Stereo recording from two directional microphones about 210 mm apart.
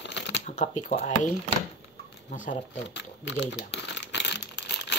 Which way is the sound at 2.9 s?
55° left (ahead or behind).